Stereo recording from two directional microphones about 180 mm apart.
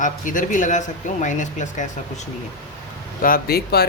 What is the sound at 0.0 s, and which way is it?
Speech, 45° left (ahead or behind).